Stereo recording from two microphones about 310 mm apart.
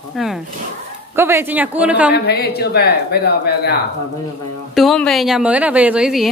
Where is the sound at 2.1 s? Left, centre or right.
Left.